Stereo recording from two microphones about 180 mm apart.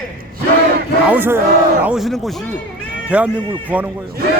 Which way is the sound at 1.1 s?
10° right (ahead or behind).